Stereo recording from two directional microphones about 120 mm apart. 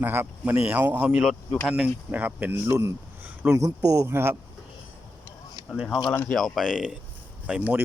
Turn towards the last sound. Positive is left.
turn(degrees=-10)  # may be behind; listen again after turning